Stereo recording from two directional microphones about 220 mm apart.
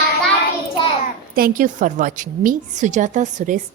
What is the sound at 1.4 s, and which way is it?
A woman's voice, 35° right (ahead or behind).